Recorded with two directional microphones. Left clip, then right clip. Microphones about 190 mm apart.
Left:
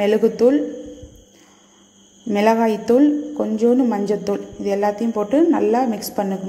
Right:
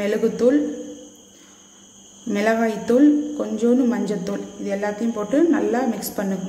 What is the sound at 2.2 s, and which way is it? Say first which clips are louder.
A woman's voice: left 4 dB; 30° left (ahead or behind).